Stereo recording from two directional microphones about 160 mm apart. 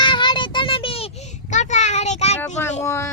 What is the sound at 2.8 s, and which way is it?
Speech, 20° left (ahead or behind).